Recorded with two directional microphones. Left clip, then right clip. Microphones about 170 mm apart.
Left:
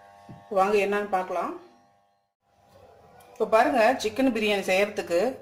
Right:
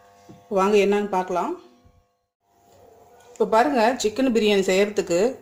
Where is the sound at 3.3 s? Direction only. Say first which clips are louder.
Right 2 dB; 65° right (ahead or behind).